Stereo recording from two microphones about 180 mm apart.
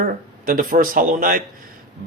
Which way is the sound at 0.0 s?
50° right (ahead or behind).